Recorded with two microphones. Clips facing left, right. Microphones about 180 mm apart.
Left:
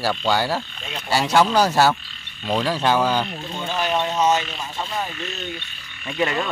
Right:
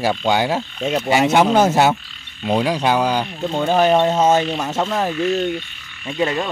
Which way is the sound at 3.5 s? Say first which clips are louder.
Right 12 dB; 55° right (ahead or behind).